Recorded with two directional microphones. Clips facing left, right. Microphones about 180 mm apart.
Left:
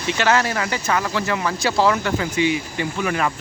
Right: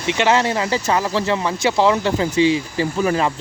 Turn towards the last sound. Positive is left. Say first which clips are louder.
# right 4 dB
turn(degrees=-30)  # may be behind; listen again after turning